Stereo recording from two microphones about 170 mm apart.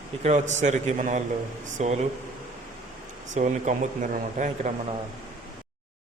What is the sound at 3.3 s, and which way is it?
Speech, 40° right (ahead or behind).